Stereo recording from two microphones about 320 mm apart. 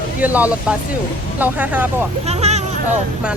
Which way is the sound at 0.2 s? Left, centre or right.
Centre.